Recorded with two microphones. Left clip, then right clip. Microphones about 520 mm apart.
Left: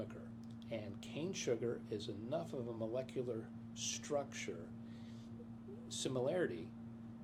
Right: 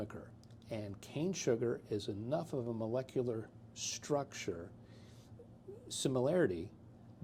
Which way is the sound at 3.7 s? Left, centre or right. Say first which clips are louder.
Right 3 dB; right.